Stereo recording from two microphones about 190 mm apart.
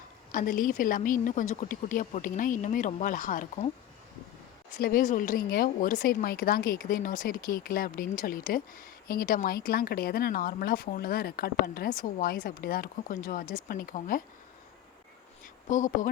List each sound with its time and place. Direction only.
0.3 s speech: 45° left (ahead or behind)
4.8 s speech: 50° left (ahead or behind)
15.7 s speech: 45° left (ahead or behind)